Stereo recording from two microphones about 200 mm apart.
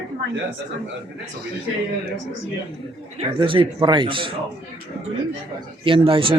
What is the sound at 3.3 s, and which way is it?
Speech, 25° right (ahead or behind).